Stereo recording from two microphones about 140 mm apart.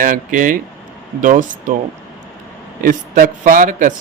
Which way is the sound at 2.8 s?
75° right (ahead or behind).